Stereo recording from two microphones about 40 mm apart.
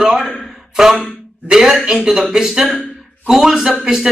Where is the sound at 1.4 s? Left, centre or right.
Centre.